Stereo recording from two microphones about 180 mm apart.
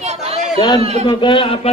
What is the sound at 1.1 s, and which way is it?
Speech, 25° left (ahead or behind).